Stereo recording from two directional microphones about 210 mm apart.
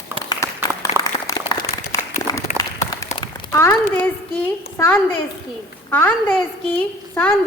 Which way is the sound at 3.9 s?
10° left (ahead or behind).